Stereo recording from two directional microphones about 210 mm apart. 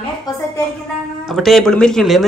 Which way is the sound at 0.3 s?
15° left (ahead or behind).